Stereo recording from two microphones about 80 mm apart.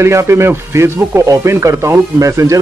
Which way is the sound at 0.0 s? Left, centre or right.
Right.